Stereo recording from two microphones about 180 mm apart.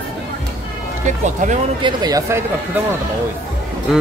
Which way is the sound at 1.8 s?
20° right (ahead or behind).